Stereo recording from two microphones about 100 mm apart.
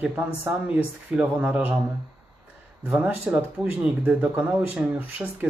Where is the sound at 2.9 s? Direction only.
10° right (ahead or behind).